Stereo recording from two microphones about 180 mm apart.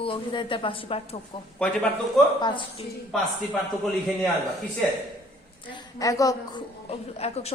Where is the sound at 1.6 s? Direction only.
5° left (ahead or behind).